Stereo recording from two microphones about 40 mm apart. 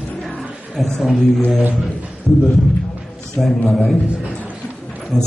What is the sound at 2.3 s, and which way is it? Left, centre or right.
Speech, centre.